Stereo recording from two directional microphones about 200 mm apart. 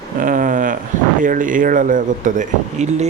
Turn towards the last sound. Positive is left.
turn(degrees=-35)  # may be behind; listen again after turning